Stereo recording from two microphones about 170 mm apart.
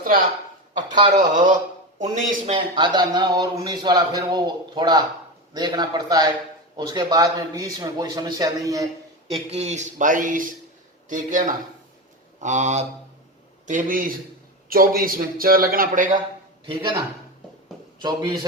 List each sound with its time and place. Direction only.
0.0 s speech: 55° right (ahead or behind)
0.9 s a man's voice: 25° right (ahead or behind)
1.1 s speech: 50° right (ahead or behind)
2.5 s a man's voice: 30° right (ahead or behind)
9.3 s a man's voice: 40° right (ahead or behind)
16.6 s a man's voice: 30° right (ahead or behind)
18.0 s a man's voice: 25° right (ahead or behind)